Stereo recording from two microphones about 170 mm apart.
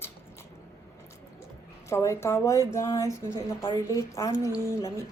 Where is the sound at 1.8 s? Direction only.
15° left (ahead or behind).